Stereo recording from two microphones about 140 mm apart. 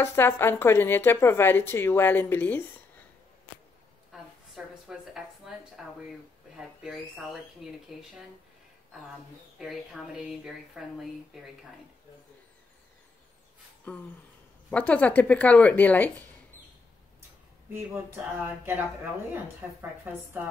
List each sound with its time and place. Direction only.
0.0 s speech: 15° left (ahead or behind)
4.1 s a sound: 5° right (ahead or behind)
5.8 s speech: 5° right (ahead or behind)
7.6 s speech: centre (ahead or behind)
9.6 s speech: 5° right (ahead or behind)
13.9 s speech: 10° left (ahead or behind)
17.7 s a woman's voice: 20° right (ahead or behind)